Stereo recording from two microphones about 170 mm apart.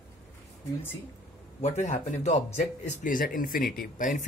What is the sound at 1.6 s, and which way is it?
Speech, 40° left (ahead or behind).